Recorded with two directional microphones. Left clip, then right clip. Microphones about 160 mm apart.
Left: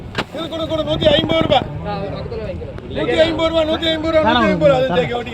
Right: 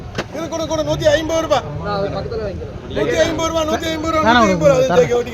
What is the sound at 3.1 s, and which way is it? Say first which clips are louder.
A man's voice: left 3 dB; 25° right (ahead or behind).